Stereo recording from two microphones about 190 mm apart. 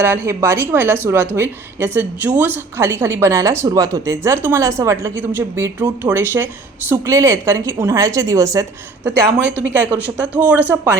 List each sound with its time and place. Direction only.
0.0 s speech: 15° right (ahead or behind)